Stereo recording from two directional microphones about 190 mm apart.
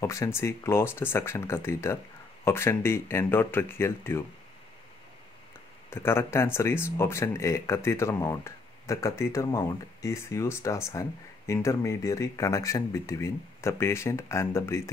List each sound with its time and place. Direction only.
0.0 s speech: 15° left (ahead or behind)
5.9 s speech: 10° left (ahead or behind)